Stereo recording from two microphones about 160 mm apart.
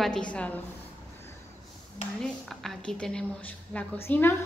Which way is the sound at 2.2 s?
5° left (ahead or behind).